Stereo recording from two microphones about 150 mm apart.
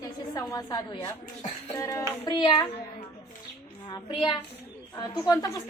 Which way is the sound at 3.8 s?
30° left (ahead or behind).